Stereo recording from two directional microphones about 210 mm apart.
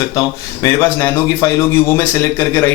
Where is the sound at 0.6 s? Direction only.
10° left (ahead or behind).